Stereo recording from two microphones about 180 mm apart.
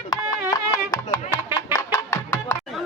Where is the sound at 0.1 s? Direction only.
20° left (ahead or behind).